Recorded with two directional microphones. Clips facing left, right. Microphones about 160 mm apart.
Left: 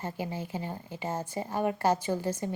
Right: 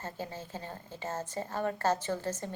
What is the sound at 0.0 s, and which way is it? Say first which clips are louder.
A woman's voice: left 5 dB; 15° left (ahead or behind).